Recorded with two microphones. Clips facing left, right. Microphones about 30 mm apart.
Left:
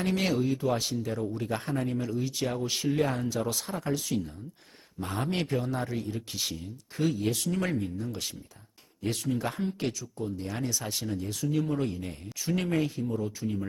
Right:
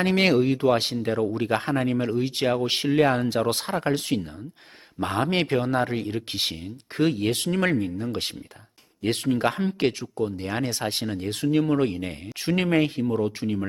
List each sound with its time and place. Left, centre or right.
0.0 s speech: right